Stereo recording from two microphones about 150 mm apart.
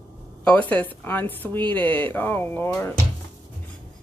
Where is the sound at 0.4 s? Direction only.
10° left (ahead or behind).